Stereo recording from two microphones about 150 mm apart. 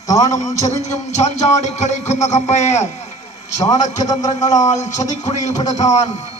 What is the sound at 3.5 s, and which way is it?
Speech, 20° left (ahead or behind).